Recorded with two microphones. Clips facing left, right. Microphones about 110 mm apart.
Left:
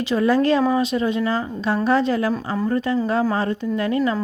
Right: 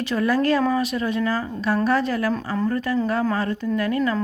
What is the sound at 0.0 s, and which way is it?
Speech, 20° left (ahead or behind).